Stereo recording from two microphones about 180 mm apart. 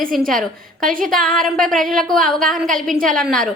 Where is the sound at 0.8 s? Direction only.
50° right (ahead or behind).